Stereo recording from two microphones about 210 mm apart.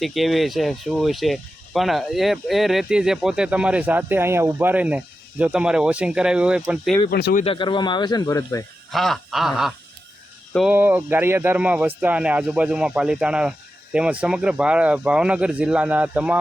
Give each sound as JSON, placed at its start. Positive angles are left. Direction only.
{"t": 0.0, "sound": "speech", "side_deg": 0}
{"t": 7.1, "sound": "speech", "side_deg": 45}
{"t": 7.4, "sound": "speech", "side_deg": 25}
{"t": 8.9, "sound": "speech", "side_deg": 0}